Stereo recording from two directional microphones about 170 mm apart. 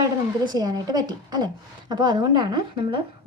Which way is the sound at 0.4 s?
25° right (ahead or behind).